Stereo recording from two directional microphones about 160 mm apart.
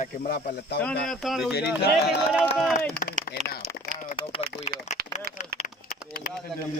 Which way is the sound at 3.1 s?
45° right (ahead or behind).